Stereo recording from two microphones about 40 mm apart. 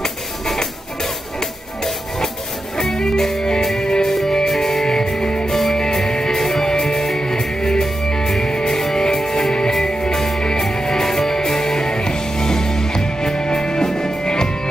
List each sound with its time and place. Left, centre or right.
2.8 s music: centre
4.1 s music: centre; by 5.5 s left
5.5 s music: centre